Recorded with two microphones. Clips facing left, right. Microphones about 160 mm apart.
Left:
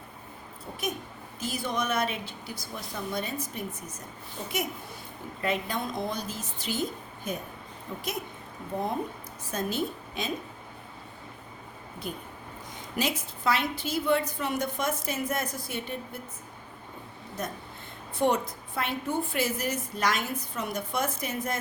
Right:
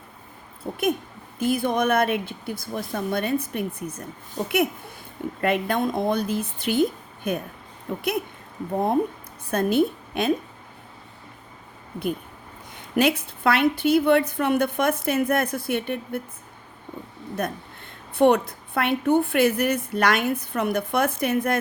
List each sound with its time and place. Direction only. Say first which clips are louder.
0.7 s a woman's voice: right 10 dB; 55° right (ahead or behind)
4.4 s speech: right 10 dB; 40° right (ahead or behind)
5.4 s a woman's voice: right 7 dB; 60° right (ahead or behind)
9.5 s a woman's voice: right 10 dB; 60° right (ahead or behind)
13.0 s a woman's voice: right 9 dB; 60° right (ahead or behind)
17.4 s a woman's voice: right 7 dB; 60° right (ahead or behind)